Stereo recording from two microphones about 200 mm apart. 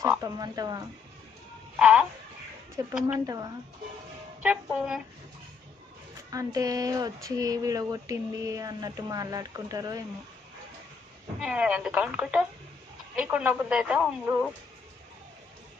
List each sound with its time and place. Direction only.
0.0 s speech: 15° right (ahead or behind)
1.8 s speech: 5° right (ahead or behind)
2.8 s speech: 15° right (ahead or behind)
4.4 s speech: 5° right (ahead or behind)
6.3 s speech: 15° right (ahead or behind)
11.3 s speech: 5° right (ahead or behind)